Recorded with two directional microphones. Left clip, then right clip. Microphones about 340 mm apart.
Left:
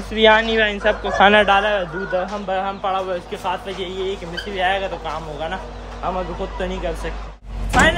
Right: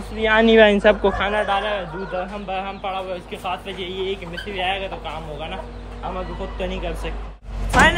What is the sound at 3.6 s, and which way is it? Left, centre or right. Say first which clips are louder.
Speech: left 2 dB; left.